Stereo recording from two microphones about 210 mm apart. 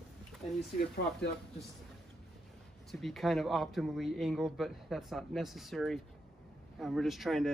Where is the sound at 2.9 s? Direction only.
Centre (ahead or behind).